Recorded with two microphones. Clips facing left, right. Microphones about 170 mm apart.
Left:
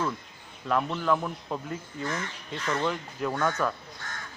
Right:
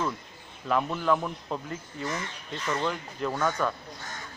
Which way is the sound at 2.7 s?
5° left (ahead or behind).